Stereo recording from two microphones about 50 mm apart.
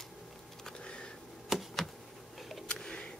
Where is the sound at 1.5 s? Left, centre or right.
Centre.